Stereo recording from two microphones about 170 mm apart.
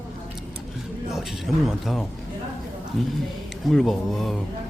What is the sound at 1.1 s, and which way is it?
A man's voice, centre (ahead or behind).